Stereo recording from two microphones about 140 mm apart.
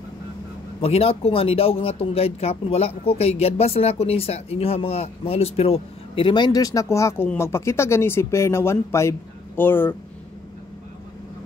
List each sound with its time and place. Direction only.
0.7 s speech: 45° left (ahead or behind); by 9.9 s 15° left (ahead or behind)